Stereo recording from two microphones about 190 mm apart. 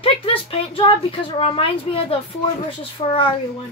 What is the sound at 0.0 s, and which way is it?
Speech, 30° left (ahead or behind).